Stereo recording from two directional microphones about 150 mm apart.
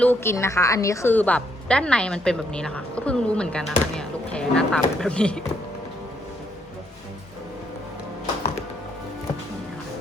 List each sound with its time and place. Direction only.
0.0 s a woman's voice: 15° left (ahead or behind)